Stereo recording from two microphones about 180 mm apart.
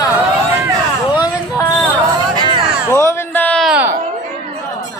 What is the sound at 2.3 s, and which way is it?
Music, 25° right (ahead or behind).